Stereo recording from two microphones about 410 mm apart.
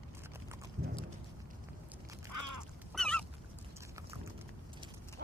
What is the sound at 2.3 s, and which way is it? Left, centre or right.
Duck, right.